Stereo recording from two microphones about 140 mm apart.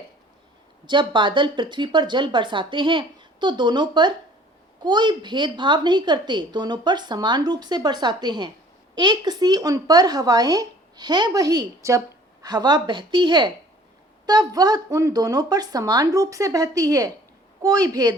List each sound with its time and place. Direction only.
0.9 s a woman's voice: 35° right (ahead or behind)